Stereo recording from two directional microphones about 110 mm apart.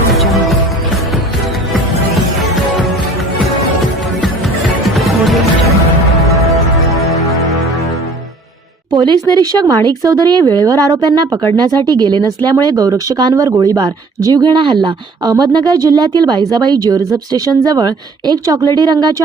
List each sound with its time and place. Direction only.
0.1 s music: centre (ahead or behind)
4.9 s music: centre (ahead or behind)
9.0 s speech: 40° right (ahead or behind)